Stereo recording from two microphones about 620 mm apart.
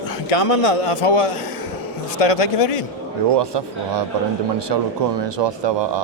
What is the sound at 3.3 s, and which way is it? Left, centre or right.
A man's voice, right.